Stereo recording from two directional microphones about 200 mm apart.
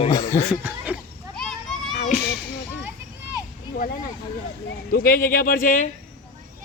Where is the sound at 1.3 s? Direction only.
Centre (ahead or behind).